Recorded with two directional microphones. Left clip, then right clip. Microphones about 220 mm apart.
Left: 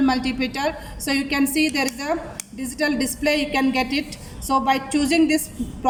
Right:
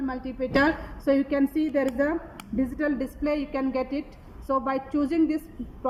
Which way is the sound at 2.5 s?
5° left (ahead or behind).